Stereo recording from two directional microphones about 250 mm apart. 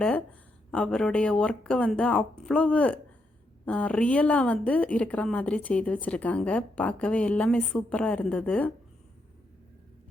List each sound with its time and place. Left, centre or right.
0.7 s a woman's voice: centre